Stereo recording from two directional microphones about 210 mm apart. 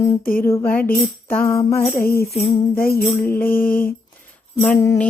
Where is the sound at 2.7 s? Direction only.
45° left (ahead or behind).